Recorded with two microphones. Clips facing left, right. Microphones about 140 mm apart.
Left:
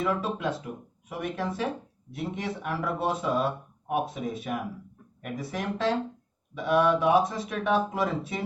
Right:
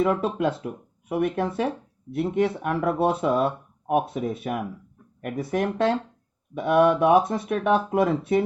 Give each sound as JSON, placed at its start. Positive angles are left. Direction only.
{"t": 0.0, "sound": "speech", "side_deg": -55}